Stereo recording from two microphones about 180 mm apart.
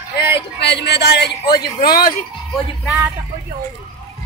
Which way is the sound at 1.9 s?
55° left (ahead or behind).